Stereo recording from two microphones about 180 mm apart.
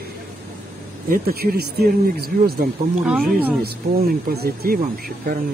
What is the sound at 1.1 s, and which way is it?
Speech, 55° right (ahead or behind).